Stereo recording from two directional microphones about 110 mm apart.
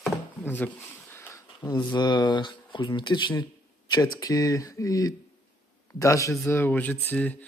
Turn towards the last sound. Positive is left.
turn(degrees=15)  # may be behind; listen again after turning